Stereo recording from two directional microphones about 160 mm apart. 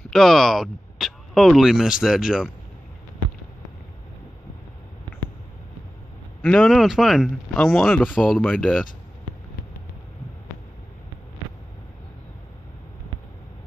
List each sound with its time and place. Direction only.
0.1 s speech: centre (ahead or behind)
6.4 s speech: 5° left (ahead or behind)